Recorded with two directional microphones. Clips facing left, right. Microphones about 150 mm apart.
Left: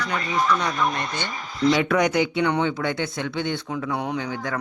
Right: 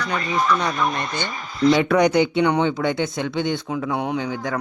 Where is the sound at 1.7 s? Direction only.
30° right (ahead or behind).